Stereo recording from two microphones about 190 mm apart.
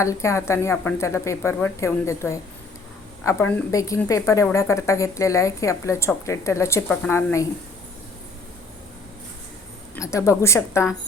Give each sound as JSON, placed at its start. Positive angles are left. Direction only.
{"t": 0.0, "sound": "speech", "side_deg": 15}
{"t": 9.9, "sound": "speech", "side_deg": 15}